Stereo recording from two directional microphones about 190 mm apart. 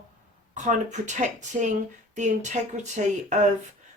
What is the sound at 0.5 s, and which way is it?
Speech, 40° right (ahead or behind).